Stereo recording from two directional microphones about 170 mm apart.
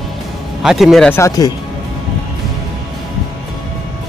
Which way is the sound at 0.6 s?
Centre (ahead or behind).